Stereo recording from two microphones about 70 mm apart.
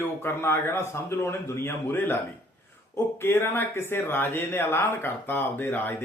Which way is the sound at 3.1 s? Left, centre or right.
Left.